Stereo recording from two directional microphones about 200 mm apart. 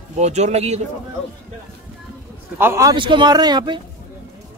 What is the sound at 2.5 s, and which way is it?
A man's voice, 15° right (ahead or behind).